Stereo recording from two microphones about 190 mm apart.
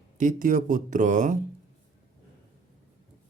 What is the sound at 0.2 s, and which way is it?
Speech, 45° right (ahead or behind).